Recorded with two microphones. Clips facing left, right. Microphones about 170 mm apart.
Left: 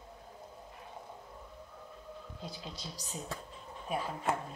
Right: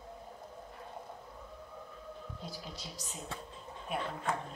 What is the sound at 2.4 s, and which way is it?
Speech, 20° left (ahead or behind).